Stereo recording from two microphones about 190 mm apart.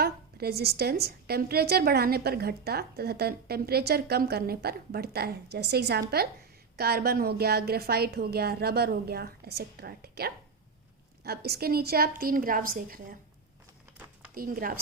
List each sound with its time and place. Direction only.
0.0 s a woman's voice: 55° right (ahead or behind)
14.3 s a woman's voice: 50° right (ahead or behind)